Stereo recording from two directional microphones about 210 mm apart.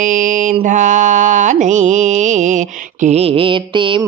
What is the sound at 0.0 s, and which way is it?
Mantra, 40° right (ahead or behind).